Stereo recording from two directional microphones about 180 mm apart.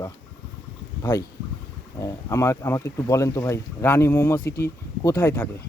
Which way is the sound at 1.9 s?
15° left (ahead or behind).